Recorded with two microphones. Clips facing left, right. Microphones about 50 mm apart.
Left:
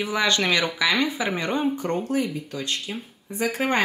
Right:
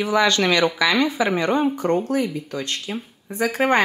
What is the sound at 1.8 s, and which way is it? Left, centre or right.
Speech, centre.